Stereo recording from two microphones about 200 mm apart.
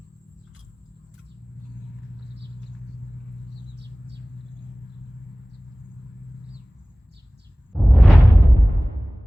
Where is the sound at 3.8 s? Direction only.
60° right (ahead or behind).